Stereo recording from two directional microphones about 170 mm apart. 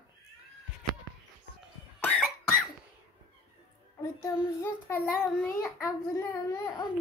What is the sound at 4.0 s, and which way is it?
Child singing, 20° left (ahead or behind).